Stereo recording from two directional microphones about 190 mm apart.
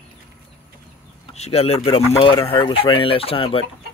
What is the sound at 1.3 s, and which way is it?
Speech, 35° left (ahead or behind).